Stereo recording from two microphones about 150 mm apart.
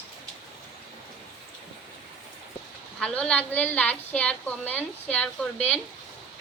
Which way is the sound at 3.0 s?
5° left (ahead or behind).